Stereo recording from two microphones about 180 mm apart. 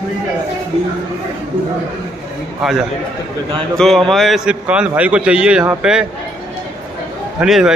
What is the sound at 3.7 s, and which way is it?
A man's voice, centre (ahead or behind).